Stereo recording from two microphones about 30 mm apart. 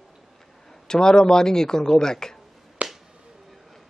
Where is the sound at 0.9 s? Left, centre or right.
Left.